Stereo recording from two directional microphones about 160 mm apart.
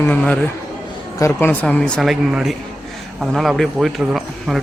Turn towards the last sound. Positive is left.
turn(degrees=0)  # may be behind; listen again after turning